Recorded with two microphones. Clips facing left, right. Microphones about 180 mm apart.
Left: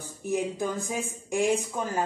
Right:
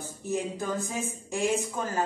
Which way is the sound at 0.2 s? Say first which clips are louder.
Left 3 dB; 15° left (ahead or behind).